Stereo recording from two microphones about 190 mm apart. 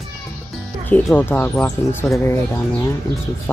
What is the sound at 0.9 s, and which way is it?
Speech, 10° left (ahead or behind).